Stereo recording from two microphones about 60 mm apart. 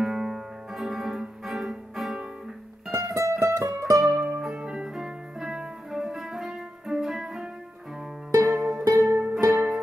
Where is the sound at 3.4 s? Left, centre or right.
Right.